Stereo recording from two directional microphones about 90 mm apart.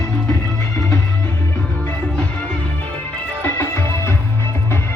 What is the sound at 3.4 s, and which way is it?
Music, 25° left (ahead or behind).